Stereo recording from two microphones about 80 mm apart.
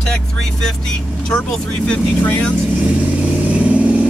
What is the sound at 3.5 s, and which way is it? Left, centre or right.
Vehicle, centre.